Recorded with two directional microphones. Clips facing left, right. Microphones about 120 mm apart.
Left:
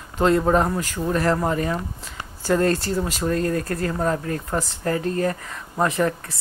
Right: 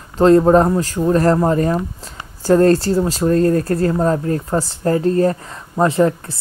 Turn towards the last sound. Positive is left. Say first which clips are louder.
# right 7 dB
turn(degrees=-30)  # may be behind; listen again after turning